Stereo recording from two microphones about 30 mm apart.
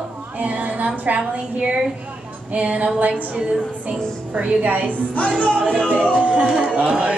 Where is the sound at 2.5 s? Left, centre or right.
Right.